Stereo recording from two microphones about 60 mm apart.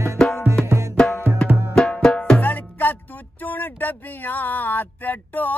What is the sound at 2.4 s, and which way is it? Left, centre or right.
Speech, left.